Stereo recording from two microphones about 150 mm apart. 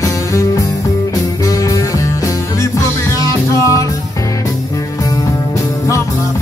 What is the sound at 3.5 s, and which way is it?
Music, 20° left (ahead or behind).